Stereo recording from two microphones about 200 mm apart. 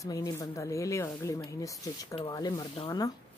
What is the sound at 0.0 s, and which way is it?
Speech, 15° left (ahead or behind).